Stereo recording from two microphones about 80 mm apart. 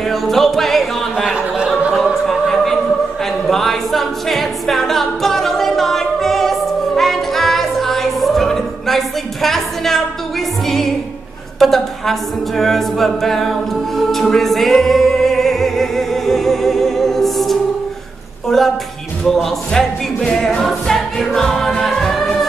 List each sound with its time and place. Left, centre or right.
0.1 s music: centre
3.4 s a capella: centre
11.6 s a capella: centre
13.9 s music: centre
18.5 s speech: centre
19.2 s music: centre